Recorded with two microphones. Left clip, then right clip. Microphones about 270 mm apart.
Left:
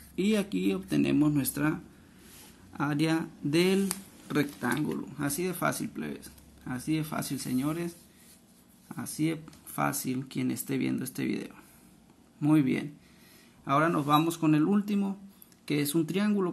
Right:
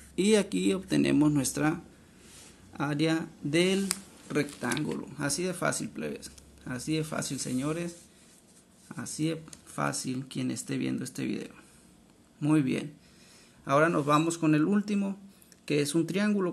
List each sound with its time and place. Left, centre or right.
0.1 s speech: centre